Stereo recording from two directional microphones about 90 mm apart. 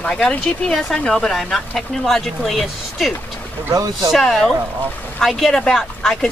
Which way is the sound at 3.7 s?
40° right (ahead or behind).